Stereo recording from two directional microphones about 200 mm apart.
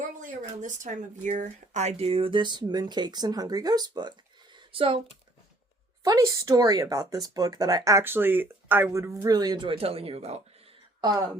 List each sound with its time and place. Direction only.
0.2 s speech: 40° right (ahead or behind); by 4.1 s 20° right (ahead or behind)
4.5 s a sound: 25° right (ahead or behind)
6.0 s speech: 15° right (ahead or behind); by 10.4 s 30° right (ahead or behind)